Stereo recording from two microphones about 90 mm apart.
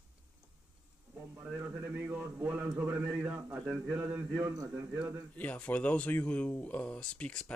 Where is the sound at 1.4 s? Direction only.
20° right (ahead or behind).